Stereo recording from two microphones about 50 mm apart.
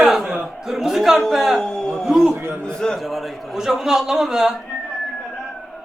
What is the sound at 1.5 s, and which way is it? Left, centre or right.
Speech, centre.